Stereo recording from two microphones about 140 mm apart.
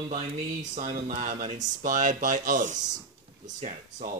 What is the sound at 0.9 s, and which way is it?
Speech, 70° right (ahead or behind).